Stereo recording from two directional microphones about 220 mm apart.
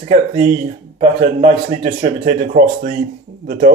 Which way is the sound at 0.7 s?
30° right (ahead or behind).